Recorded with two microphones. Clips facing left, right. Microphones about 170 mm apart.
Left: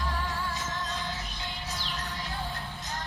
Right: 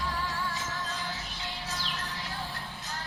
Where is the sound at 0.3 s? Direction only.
20° left (ahead or behind).